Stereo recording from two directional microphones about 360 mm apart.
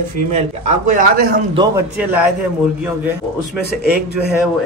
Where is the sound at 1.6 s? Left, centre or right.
Centre.